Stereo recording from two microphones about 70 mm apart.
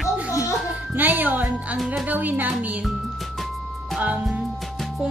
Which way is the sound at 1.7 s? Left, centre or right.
Centre.